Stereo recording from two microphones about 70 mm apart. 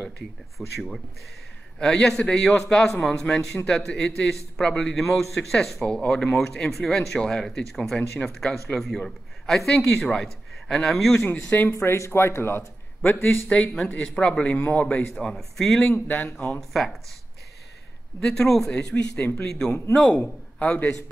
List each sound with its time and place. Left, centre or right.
0.6 s speech: centre
1.8 s speech: centre
11.2 s a man's voice: left
11.8 s a man's voice: left
13.5 s a man's voice: centre
15.1 s speech: centre
15.9 s a man's voice: left
16.5 s speech: centre
18.2 s a man's voice: centre